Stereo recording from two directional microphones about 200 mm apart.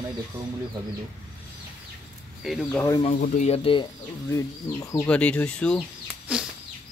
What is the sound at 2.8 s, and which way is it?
Speech, 20° left (ahead or behind).